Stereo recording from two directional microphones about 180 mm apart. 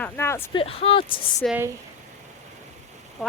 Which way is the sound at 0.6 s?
30° left (ahead or behind).